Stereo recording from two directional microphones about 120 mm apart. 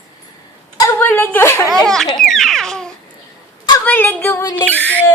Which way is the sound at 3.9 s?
15° left (ahead or behind).